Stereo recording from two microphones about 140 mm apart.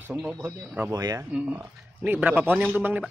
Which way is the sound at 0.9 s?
25° right (ahead or behind).